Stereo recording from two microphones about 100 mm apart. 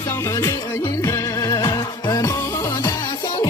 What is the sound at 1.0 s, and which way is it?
Music, 40° left (ahead or behind).